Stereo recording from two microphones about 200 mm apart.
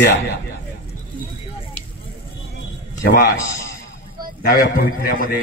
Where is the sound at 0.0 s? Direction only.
60° left (ahead or behind).